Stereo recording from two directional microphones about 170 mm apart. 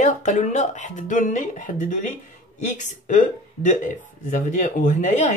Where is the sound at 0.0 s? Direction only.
45° left (ahead or behind).